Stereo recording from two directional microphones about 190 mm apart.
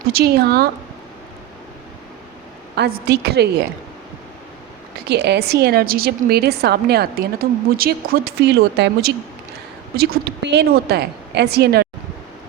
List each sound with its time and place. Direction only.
0.1 s a woman's voice: 55° right (ahead or behind)
2.7 s a woman's voice: 60° right (ahead or behind)
5.0 s a woman's voice: 60° right (ahead or behind)